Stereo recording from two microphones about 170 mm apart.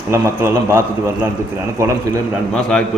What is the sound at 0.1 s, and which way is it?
A man's voice, 15° right (ahead or behind).